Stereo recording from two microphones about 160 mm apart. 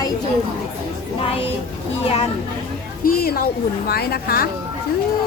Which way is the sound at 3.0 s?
70° left (ahead or behind).